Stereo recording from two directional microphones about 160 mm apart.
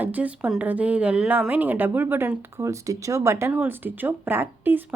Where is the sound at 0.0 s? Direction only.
10° right (ahead or behind).